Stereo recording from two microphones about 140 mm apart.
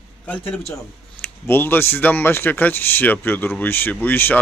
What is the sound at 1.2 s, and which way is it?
Speech, 15° left (ahead or behind).